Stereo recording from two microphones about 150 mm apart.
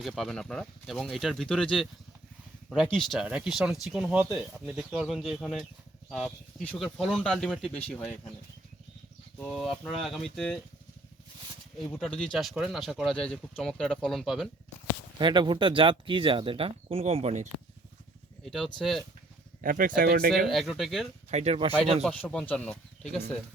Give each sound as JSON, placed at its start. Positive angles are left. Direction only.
{"t": 0.0, "sound": "speech", "side_deg": 0}
{"t": 9.5, "sound": "speech", "side_deg": 0}
{"t": 11.9, "sound": "speech", "side_deg": 5}
{"t": 15.2, "sound": "speech", "side_deg": -30}
{"t": 18.4, "sound": "speech", "side_deg": 0}
{"t": 19.6, "sound": "speech", "side_deg": -65}
{"t": 20.5, "sound": "speech", "side_deg": 0}
{"t": 21.2, "sound": "speech", "side_deg": -45}
{"t": 22.0, "sound": "speech", "side_deg": 5}